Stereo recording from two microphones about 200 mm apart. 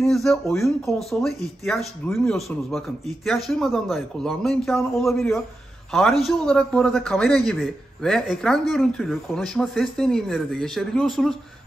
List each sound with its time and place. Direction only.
0.0 s a man's voice: centre (ahead or behind)